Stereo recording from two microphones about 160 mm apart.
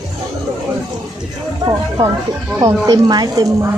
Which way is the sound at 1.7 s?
20° right (ahead or behind).